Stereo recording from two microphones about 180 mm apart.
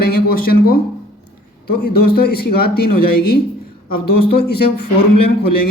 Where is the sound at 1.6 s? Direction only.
60° left (ahead or behind).